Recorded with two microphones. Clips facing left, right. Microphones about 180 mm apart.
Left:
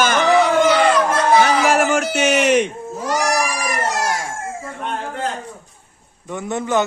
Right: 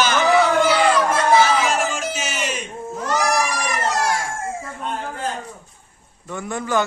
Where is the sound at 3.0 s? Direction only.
10° left (ahead or behind).